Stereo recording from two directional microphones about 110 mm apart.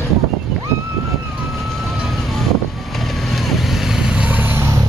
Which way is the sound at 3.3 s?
Centre (ahead or behind).